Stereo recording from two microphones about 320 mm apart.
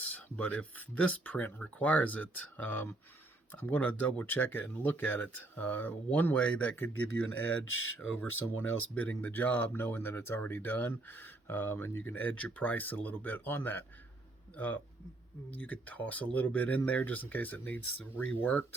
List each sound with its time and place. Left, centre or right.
0.0 s speech: centre
7.6 s speech: left
8.5 s speech: centre
15.5 s speech: centre